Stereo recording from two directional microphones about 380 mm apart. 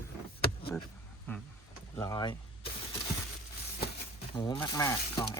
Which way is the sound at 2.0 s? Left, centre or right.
Centre.